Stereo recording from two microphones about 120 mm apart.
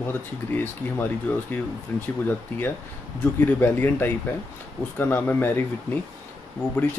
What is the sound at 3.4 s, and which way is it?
Speech, 15° left (ahead or behind).